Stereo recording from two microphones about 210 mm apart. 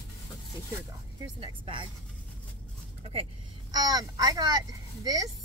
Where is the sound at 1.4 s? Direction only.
25° right (ahead or behind).